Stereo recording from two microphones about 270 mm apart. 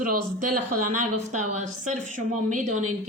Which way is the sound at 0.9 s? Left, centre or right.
Right.